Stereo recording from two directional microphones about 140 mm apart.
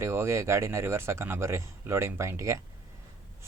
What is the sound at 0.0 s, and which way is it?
A man's voice, 20° right (ahead or behind).